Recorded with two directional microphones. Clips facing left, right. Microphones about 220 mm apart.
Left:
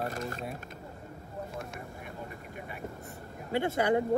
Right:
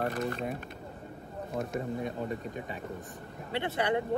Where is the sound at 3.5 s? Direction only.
45° left (ahead or behind).